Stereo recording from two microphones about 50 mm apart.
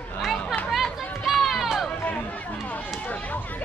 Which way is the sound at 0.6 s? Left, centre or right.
Centre.